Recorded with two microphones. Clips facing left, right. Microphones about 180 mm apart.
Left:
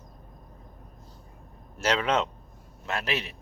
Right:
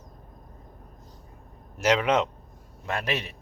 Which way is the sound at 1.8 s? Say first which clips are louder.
Right 3 dB; 10° right (ahead or behind).